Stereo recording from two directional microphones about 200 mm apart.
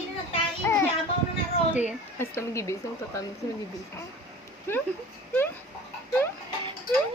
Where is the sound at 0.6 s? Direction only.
15° left (ahead or behind).